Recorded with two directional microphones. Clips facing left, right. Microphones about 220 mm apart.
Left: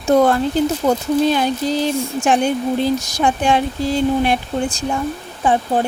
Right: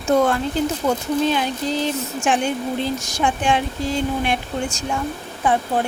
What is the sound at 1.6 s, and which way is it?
Speech, 35° left (ahead or behind).